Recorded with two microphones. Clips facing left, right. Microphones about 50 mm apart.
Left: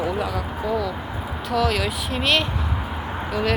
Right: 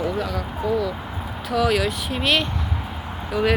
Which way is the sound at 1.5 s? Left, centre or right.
Centre.